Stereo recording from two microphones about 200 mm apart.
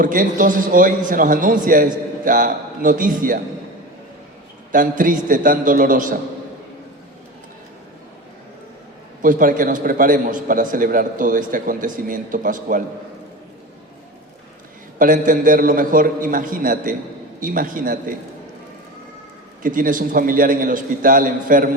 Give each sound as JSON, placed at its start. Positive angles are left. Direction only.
{"t": 0.0, "sound": "a man's voice", "side_deg": -40}
{"t": 4.7, "sound": "a man's voice", "side_deg": -40}
{"t": 9.2, "sound": "a man's voice", "side_deg": -45}
{"t": 14.9, "sound": "a man's voice", "side_deg": -40}
{"t": 19.6, "sound": "a man's voice", "side_deg": -45}